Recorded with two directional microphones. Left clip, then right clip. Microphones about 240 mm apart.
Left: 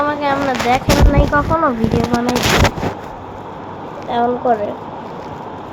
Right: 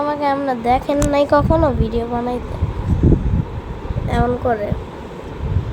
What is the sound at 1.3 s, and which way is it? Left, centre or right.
Speech, right.